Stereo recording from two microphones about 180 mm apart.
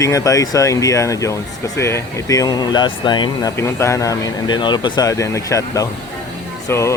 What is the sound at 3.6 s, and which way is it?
Speech, 15° left (ahead or behind).